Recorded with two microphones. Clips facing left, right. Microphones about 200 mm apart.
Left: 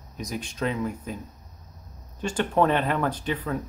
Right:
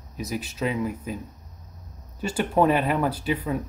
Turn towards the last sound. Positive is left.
turn(degrees=-10)  # may be behind; listen again after turning